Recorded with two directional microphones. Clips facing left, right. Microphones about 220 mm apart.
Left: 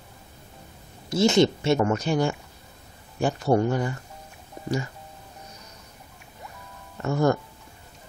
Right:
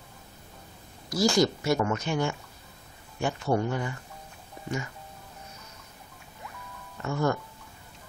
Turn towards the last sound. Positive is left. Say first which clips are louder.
# left 5 dB
turn(degrees=35)  # may be behind; listen again after turning